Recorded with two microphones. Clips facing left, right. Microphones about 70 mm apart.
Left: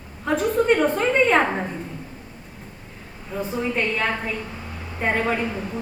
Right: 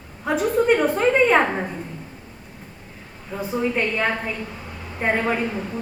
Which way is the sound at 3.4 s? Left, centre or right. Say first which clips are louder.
Right 1 dB; centre.